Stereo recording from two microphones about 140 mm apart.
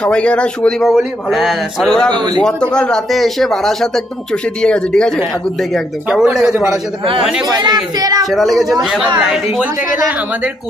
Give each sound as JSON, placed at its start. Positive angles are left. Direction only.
{"t": 0.0, "sound": "speech", "side_deg": 10}
{"t": 2.1, "sound": "speech", "side_deg": -30}
{"t": 2.4, "sound": "speech", "side_deg": 5}
{"t": 7.4, "sound": "speech", "side_deg": -30}
{"t": 8.3, "sound": "speech", "side_deg": 0}